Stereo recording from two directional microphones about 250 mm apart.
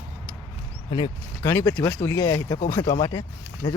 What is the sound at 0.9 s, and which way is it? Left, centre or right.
Speech, centre.